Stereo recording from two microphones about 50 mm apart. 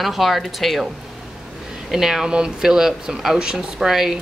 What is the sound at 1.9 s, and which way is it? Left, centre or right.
Speech, centre.